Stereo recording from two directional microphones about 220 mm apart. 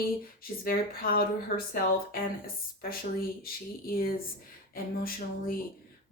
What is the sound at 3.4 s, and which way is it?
Speech, 40° left (ahead or behind).